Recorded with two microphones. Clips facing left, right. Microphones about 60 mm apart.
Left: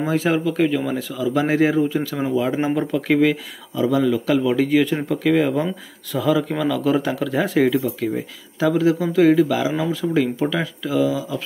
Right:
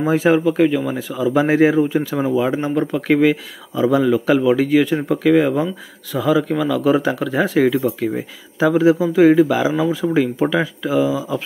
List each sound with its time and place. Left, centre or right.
0.0 s speech: centre
2.6 s speech: centre
3.0 s speech: centre
3.7 s speech: right
4.6 s speech: centre; by 11.4 s right